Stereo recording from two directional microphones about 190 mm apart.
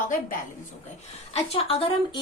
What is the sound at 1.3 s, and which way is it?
Speech, 30° left (ahead or behind).